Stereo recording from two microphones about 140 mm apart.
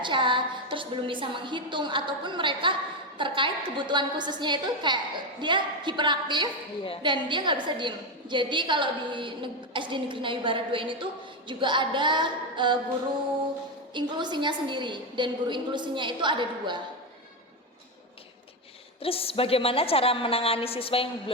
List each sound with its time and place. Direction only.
0.0 s a woman's voice: 35° right (ahead or behind)
13.9 s a woman's voice: 35° right (ahead or behind)
19.0 s a woman's voice: 40° left (ahead or behind)